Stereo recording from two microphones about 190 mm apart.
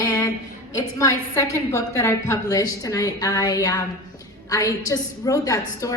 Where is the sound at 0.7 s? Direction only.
15° left (ahead or behind).